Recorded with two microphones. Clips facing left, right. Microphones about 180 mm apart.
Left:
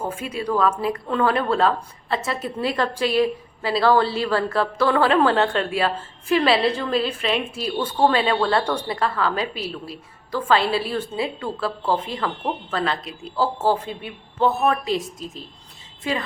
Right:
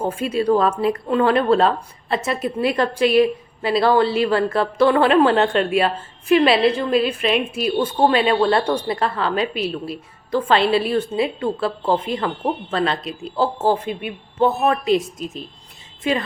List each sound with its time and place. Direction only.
0.3 s a woman's voice: 30° right (ahead or behind)